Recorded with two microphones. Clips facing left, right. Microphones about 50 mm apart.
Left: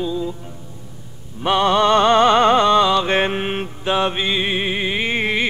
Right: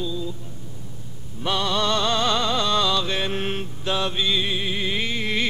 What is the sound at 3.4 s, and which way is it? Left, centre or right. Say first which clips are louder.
Mantra: left 4 dB; left.